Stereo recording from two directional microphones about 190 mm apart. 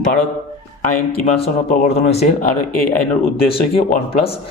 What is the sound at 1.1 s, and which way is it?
A man's voice, 35° left (ahead or behind).